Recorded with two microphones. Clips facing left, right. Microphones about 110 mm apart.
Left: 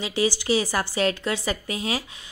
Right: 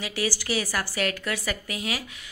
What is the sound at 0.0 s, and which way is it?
A woman's voice, 25° left (ahead or behind).